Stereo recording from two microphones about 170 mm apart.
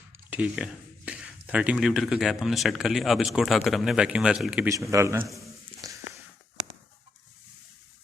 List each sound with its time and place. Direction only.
0.1 s speech: 10° right (ahead or behind)
4.7 s speech: 20° right (ahead or behind)
5.8 s a sound: 20° right (ahead or behind)